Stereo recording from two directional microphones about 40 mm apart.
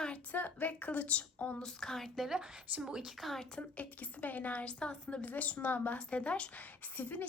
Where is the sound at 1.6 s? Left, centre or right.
Centre.